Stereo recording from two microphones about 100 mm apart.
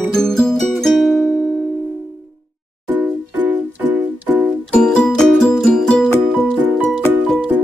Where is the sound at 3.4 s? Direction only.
15° right (ahead or behind).